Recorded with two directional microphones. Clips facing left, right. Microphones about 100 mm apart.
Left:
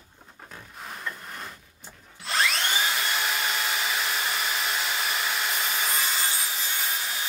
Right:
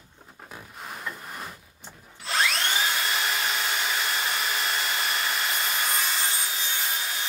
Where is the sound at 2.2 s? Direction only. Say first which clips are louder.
Even; centre (ahead or behind).